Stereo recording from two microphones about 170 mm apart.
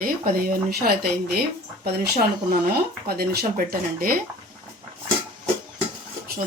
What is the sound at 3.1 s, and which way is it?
Speech, 60° right (ahead or behind).